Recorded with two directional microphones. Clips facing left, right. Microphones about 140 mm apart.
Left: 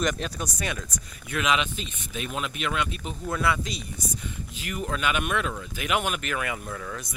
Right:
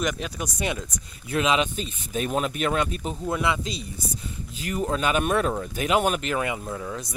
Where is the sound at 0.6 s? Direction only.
25° right (ahead or behind); by 3.2 s 40° right (ahead or behind).